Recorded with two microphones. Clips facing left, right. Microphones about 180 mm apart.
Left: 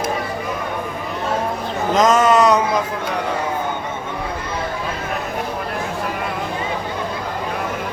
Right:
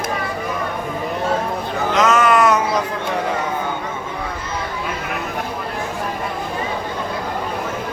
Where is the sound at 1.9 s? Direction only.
35° left (ahead or behind).